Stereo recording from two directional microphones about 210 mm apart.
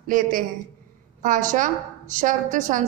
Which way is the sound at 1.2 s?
40° right (ahead or behind).